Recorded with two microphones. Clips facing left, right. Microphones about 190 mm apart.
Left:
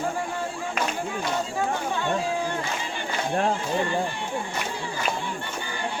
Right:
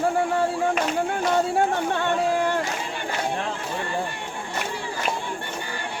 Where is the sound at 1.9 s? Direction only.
70° right (ahead or behind).